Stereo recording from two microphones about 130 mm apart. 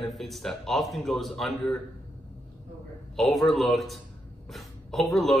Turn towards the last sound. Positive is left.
turn(degrees=0)  # may be behind; listen again after turning